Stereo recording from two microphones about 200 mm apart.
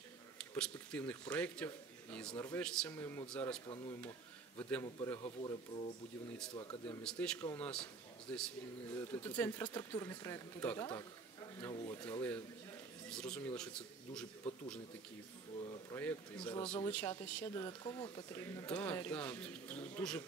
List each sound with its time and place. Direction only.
0.4 s a man's voice: 5° left (ahead or behind)
3.6 s speech: 25° left (ahead or behind)
4.6 s a man's voice: 5° left (ahead or behind)
5.2 s speech: 25° left (ahead or behind)
7.0 s a man's voice: 5° left (ahead or behind)
11.7 s speech: 25° left (ahead or behind)
12.0 s a man's voice: 10° left (ahead or behind)
14.4 s a sound: 5° left (ahead or behind)
15.9 s a man's voice: 10° left (ahead or behind)